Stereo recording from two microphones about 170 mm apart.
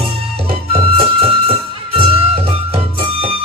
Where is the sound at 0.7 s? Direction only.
30° right (ahead or behind).